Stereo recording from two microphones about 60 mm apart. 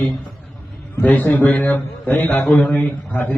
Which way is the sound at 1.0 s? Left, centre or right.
Left.